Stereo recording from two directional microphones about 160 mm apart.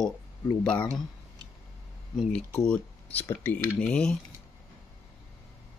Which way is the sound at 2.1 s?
Centre (ahead or behind).